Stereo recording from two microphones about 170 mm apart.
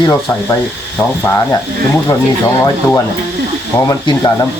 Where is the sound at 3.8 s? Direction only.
25° left (ahead or behind).